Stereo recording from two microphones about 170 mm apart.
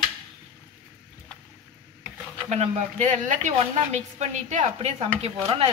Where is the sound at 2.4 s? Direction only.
40° right (ahead or behind).